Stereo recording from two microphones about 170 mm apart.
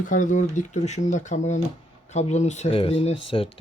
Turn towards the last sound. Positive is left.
turn(degrees=30)  # may be behind; listen again after turning